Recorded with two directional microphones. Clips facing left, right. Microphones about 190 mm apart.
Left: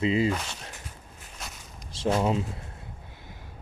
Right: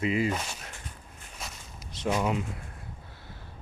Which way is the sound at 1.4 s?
Centre (ahead or behind).